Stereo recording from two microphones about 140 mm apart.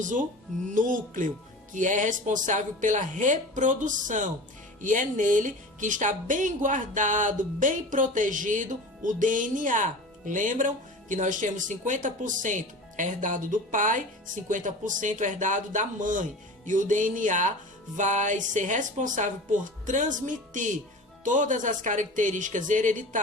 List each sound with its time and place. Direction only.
0.0 s speech: 70° right (ahead or behind)